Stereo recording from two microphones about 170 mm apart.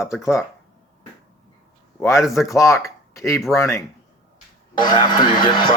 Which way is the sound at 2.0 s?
15° left (ahead or behind).